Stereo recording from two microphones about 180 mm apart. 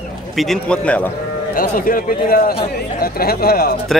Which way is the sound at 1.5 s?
50° left (ahead or behind).